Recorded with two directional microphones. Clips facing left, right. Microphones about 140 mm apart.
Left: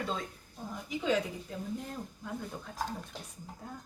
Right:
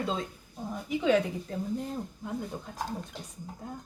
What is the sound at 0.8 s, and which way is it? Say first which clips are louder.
Speech: right 6 dB; 60° right (ahead or behind).